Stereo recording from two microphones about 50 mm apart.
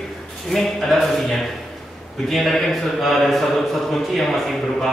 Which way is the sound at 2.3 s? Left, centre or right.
Centre.